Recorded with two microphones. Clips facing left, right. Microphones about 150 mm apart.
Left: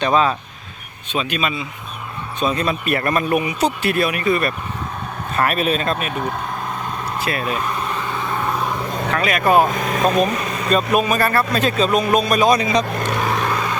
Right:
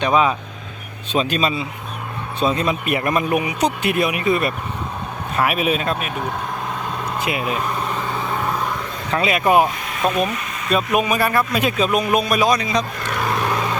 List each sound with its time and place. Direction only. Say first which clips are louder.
0.0 s speech: even; 10° right (ahead or behind)
1.1 s speech: right 3 dB; 35° right (ahead or behind)
2.4 s speech: right 1 dB; 20° right (ahead or behind)
5.4 s speech: even; 10° right (ahead or behind)
7.2 s speech: even; 15° right (ahead or behind)
8.4 s vehicle: left 1 dB; 10° left (ahead or behind)
9.1 s speech: even; 20° right (ahead or behind)
9.7 s speech: left 4 dB; 45° left (ahead or behind)
10.9 s speech: right 1 dB; 10° right (ahead or behind)
13.3 s vehicle: even; 5° right (ahead or behind)